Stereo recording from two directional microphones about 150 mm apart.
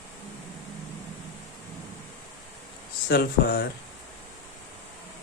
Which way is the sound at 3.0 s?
90° left.